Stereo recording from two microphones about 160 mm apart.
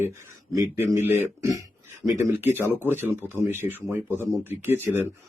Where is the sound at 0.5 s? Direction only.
20° right (ahead or behind).